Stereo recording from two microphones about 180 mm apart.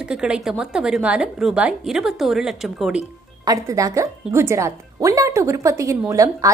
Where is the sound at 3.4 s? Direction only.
20° right (ahead or behind).